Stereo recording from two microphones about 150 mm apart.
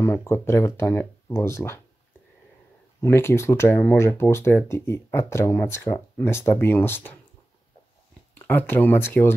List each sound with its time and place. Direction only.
0.0 s speech: 15° left (ahead or behind)
3.0 s speech: 15° left (ahead or behind)
8.4 s speech: 15° left (ahead or behind)